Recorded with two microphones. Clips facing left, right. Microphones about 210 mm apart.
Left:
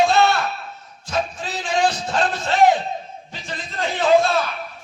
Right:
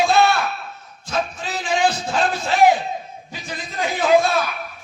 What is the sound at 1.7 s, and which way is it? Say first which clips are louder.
Music: even; 5° right (ahead or behind).